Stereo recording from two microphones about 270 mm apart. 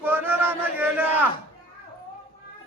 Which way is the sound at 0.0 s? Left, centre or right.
Centre.